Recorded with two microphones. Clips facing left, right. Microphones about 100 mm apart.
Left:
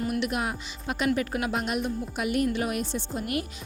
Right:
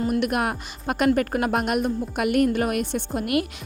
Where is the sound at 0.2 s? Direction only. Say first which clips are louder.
Right 5 dB; 55° right (ahead or behind).